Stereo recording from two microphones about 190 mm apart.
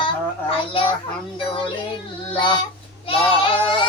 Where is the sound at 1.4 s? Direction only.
25° left (ahead or behind).